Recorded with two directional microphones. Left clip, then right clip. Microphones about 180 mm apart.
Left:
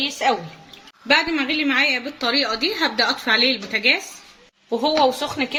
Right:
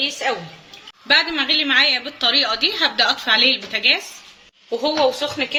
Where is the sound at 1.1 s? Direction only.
45° left (ahead or behind).